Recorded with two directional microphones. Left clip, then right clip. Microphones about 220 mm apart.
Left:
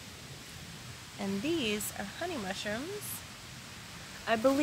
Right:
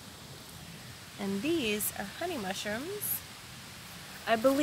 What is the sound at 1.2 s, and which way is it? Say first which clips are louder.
Speech: right 1 dB; 10° right (ahead or behind).